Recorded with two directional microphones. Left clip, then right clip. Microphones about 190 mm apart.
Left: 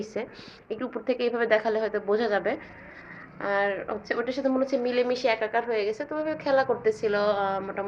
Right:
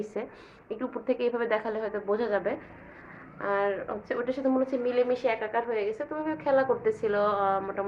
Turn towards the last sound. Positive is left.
turn(degrees=15)  # may be behind; listen again after turning